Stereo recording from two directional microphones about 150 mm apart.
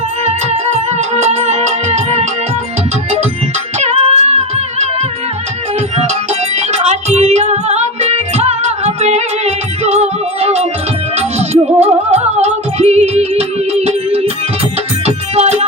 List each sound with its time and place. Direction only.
0.3 s music: 45° right (ahead or behind)
3.8 s music: 45° right (ahead or behind)
6.7 s music: 45° right (ahead or behind)